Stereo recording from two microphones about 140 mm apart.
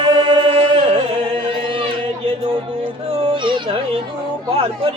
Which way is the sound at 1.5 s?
40° right (ahead or behind).